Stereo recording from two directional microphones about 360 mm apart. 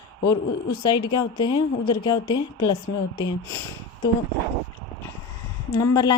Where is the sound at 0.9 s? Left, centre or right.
Centre.